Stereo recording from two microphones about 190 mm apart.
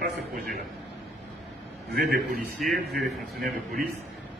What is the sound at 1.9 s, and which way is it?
Speech, 50° right (ahead or behind).